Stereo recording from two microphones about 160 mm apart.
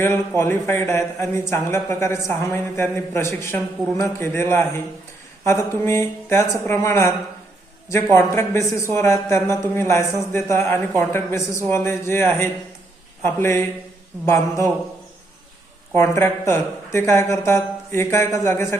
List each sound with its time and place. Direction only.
0.0 s speech: 15° left (ahead or behind)
8.1 s speech: 15° left (ahead or behind)
16.0 s speech: 15° left (ahead or behind)